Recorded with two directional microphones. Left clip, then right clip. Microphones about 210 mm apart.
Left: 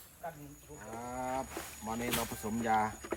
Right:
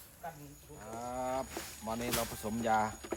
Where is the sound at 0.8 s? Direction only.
Centre (ahead or behind).